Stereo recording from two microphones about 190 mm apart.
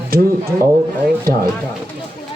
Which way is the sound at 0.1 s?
55° right (ahead or behind).